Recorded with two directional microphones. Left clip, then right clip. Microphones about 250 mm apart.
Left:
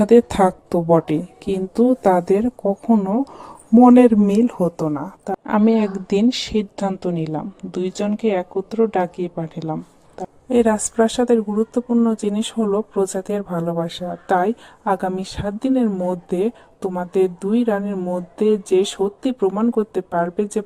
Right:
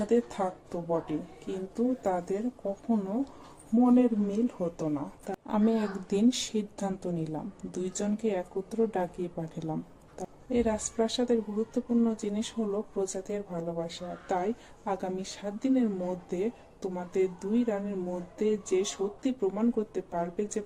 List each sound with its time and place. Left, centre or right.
0.0 s a woman's voice: left
5.3 s speech: left
10.5 s speech: left